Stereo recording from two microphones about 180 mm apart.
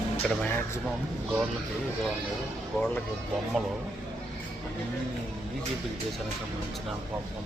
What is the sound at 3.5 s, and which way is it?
Speech, centre (ahead or behind).